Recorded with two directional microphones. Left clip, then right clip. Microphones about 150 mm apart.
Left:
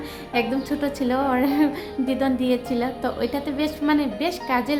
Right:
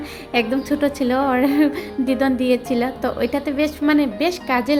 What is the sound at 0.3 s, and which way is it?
A woman's voice, 25° right (ahead or behind).